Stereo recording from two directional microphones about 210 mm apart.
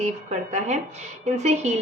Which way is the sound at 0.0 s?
30° right (ahead or behind).